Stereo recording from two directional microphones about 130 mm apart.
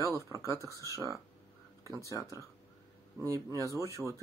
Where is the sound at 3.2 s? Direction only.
25° right (ahead or behind).